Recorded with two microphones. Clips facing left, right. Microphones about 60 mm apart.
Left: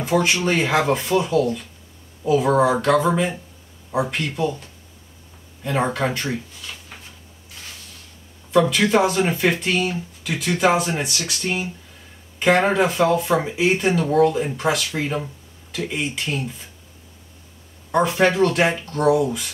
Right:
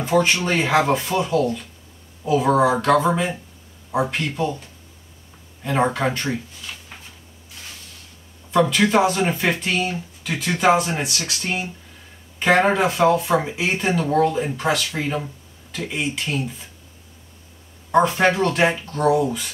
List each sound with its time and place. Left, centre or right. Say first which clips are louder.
0.0 s speech: right 1 dB; centre
8.5 s speech: even; centre
17.9 s speech: right 1 dB; centre